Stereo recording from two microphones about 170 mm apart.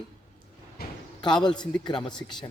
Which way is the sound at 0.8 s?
65° left (ahead or behind).